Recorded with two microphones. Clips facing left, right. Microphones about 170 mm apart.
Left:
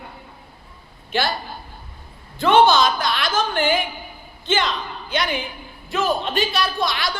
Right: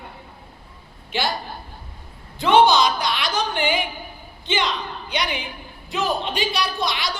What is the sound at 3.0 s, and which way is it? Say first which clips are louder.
Speech: left 2 dB; 15° right (ahead or behind).